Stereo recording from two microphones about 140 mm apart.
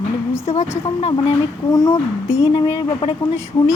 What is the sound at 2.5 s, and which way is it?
Speech, 35° left (ahead or behind).